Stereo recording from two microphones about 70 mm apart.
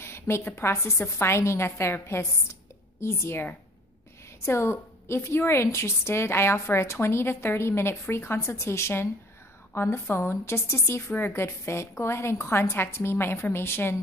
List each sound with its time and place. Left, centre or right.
0.0 s a woman's voice: left
4.5 s a woman's voice: left